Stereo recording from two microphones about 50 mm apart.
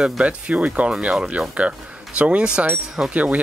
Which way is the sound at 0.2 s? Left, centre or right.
Right.